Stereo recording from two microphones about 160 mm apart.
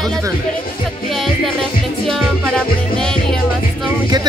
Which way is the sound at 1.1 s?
Centre (ahead or behind).